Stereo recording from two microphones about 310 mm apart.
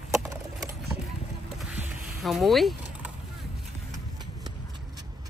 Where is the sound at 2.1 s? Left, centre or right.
Centre.